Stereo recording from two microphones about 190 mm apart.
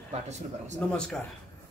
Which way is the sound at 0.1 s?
35° right (ahead or behind).